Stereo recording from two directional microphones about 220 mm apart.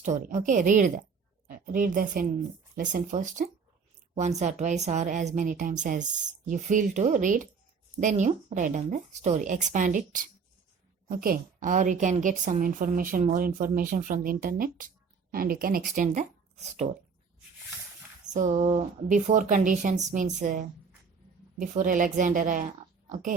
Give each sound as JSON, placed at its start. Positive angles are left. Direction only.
{"t": 0.0, "sound": "a woman's voice", "side_deg": -35}
{"t": 18.3, "sound": "a woman's voice", "side_deg": -35}